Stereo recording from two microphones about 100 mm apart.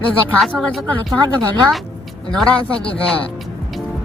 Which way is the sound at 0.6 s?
Centre (ahead or behind).